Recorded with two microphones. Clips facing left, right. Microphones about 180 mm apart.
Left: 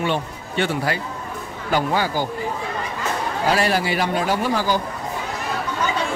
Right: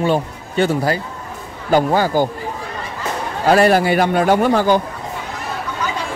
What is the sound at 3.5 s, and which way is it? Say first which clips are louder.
A man's voice: right 9 dB; 50° right (ahead or behind).